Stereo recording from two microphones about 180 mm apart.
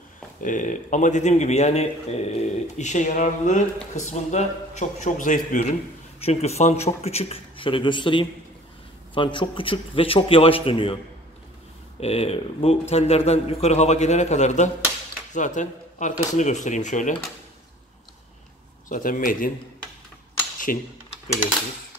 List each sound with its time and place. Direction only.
0.4 s a man's voice: 45° left (ahead or behind); by 11.0 s 30° left (ahead or behind)
12.0 s a man's voice: 35° left (ahead or behind)
18.9 s speech: 50° left (ahead or behind)
20.5 s a sound: 45° left (ahead or behind)